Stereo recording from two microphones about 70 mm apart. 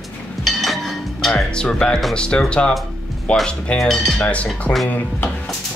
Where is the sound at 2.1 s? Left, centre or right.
Centre.